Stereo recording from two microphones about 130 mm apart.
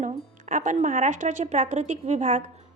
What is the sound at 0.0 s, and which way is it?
A woman's voice, 75° right (ahead or behind).